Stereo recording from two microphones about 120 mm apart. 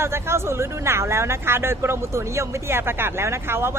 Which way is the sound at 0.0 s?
20° right (ahead or behind).